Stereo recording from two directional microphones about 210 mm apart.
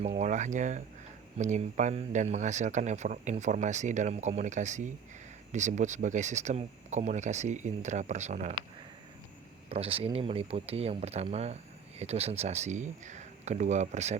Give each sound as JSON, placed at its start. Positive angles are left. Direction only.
{"t": 0.2, "sound": "speech", "side_deg": -35}
{"t": 9.6, "sound": "speech", "side_deg": -25}